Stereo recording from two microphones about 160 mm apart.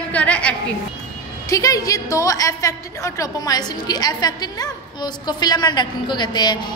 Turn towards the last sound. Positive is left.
turn(degrees=25)  # may be behind; listen again after turning